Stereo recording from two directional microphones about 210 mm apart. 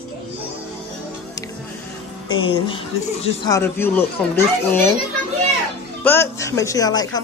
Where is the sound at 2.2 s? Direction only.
25° left (ahead or behind).